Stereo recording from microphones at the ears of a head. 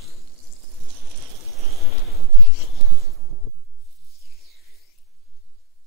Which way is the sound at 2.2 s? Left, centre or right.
Left.